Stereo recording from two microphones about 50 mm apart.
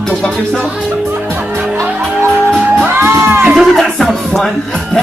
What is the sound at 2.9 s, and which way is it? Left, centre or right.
Music, right.